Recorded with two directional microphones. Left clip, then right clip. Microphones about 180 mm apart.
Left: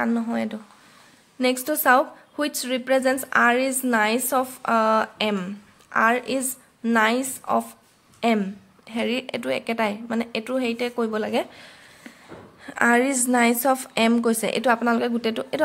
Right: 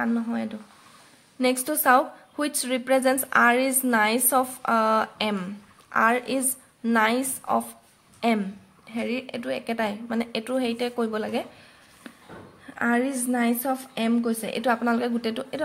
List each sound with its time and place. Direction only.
0.0 s a woman's voice: 25° left (ahead or behind)
1.4 s a woman's voice: 10° left (ahead or behind)
12.6 s a woman's voice: 30° left (ahead or behind)